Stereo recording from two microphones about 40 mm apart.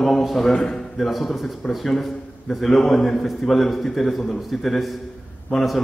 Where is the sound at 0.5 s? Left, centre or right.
Centre.